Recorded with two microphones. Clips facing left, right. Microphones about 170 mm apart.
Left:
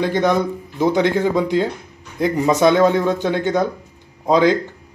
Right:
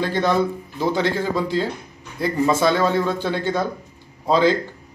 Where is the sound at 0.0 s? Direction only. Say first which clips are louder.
Left 2 dB; 20° left (ahead or behind).